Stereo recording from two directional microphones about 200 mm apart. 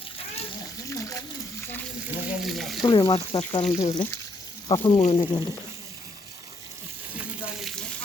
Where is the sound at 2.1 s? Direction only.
Centre (ahead or behind).